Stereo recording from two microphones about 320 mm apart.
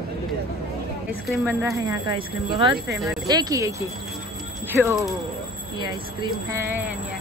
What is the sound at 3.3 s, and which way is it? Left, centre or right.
A woman's voice, centre.